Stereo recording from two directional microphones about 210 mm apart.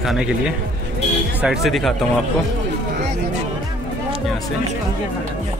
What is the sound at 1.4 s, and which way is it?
Speech, centre (ahead or behind).